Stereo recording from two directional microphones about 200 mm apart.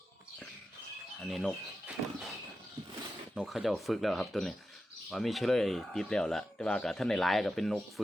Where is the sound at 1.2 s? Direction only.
Centre (ahead or behind).